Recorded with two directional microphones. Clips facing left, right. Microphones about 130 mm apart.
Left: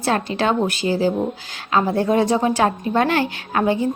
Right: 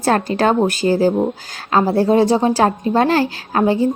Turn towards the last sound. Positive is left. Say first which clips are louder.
# right 3 dB
turn(degrees=-35)  # may be behind; listen again after turning